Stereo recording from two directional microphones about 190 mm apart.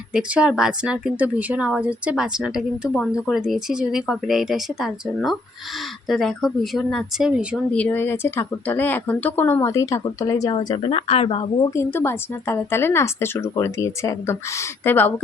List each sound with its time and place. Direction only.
0.1 s a woman's voice: 5° right (ahead or behind)
7.7 s a woman's voice: 5° left (ahead or behind); by 11.7 s 25° left (ahead or behind)
11.7 s a woman's voice: 15° left (ahead or behind)